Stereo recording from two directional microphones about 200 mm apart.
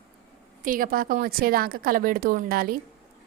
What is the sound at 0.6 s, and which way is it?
A woman's voice, 45° right (ahead or behind).